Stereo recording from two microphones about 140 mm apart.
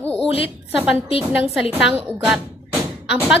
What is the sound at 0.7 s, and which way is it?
Speech, 10° right (ahead or behind).